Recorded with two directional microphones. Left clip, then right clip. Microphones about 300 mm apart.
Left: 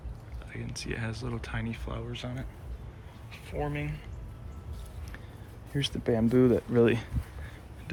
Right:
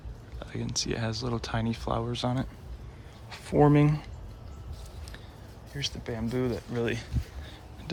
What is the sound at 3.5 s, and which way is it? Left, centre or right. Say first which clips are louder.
Speech: right 12 dB; right.